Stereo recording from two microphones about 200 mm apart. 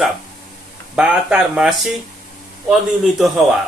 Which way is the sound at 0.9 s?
5° right (ahead or behind).